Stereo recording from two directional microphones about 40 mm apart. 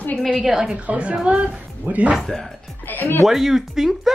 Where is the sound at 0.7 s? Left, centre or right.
Right.